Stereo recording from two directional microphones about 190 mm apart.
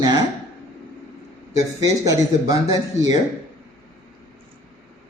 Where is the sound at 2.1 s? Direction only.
20° right (ahead or behind).